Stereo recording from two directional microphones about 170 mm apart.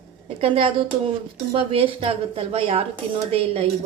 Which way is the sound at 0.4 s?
35° right (ahead or behind).